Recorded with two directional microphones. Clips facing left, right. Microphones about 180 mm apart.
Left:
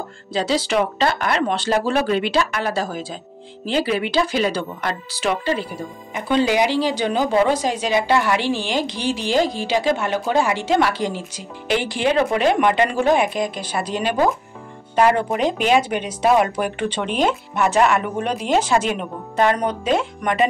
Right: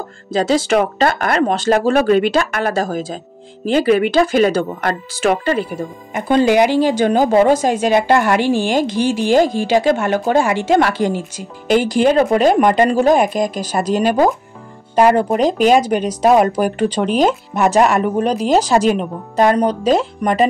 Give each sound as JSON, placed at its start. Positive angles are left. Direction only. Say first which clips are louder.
{"t": 0.3, "sound": "speech", "louder": "right 6 dB", "side_deg": -45}